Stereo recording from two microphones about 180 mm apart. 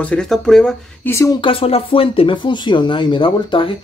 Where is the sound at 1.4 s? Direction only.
30° left (ahead or behind).